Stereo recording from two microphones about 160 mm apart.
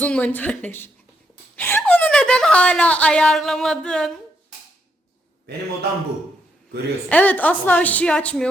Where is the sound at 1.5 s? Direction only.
15° left (ahead or behind).